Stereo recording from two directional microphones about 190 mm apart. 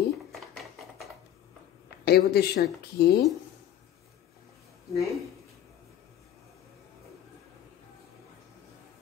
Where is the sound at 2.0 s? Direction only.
55° left (ahead or behind).